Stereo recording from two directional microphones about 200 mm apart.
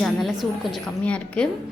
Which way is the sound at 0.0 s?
Centre (ahead or behind).